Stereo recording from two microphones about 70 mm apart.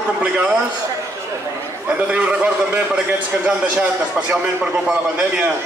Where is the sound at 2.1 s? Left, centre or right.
Centre.